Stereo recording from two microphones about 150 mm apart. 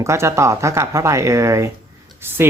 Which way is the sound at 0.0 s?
20° right (ahead or behind).